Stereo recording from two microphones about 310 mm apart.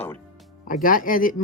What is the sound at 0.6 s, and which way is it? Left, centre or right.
Speech, left.